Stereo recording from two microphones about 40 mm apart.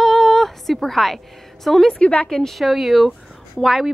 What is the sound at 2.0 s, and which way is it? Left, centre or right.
Speech, left.